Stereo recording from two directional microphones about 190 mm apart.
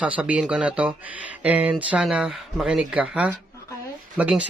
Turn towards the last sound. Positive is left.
turn(degrees=-5)  # may be behind; listen again after turning